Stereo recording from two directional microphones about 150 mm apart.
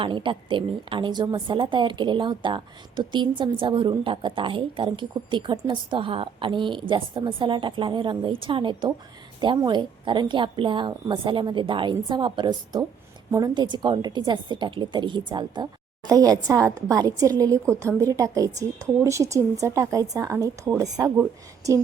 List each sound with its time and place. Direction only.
0.0 s a woman's voice: 35° right (ahead or behind)